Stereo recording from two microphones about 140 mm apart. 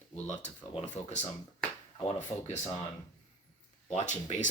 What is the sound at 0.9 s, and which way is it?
Speech, 55° left (ahead or behind).